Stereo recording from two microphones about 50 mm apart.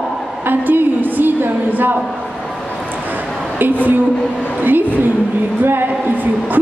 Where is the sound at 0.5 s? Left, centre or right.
Right.